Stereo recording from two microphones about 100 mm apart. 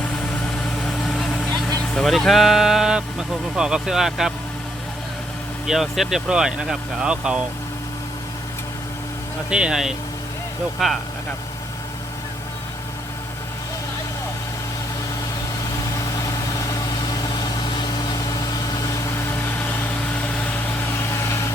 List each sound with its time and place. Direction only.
0.6 s vehicle: 5° left (ahead or behind)
1.9 s speech: centre (ahead or behind)
5.6 s speech: 5° right (ahead or behind)
9.5 s speech: 10° right (ahead or behind)
16.1 s vehicle: 35° left (ahead or behind)
19.3 s vehicle: 20° left (ahead or behind)
21.1 s vehicle: 30° left (ahead or behind)